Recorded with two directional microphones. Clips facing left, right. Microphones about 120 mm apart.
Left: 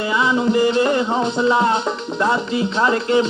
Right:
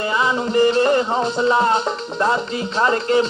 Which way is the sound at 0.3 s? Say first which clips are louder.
Even; 40° right (ahead or behind).